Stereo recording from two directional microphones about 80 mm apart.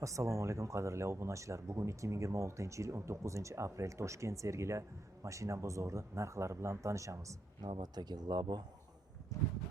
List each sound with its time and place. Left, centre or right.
0.0 s speech: right
7.6 s speech: right
9.3 s a sound: left